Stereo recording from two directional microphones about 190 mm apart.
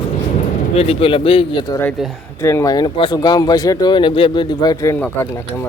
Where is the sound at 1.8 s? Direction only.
Centre (ahead or behind).